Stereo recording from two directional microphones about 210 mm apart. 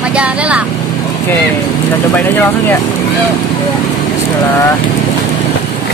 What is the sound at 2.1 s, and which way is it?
Speech, 10° left (ahead or behind).